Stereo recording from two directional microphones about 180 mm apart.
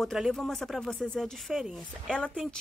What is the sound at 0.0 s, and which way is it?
Speech, centre (ahead or behind).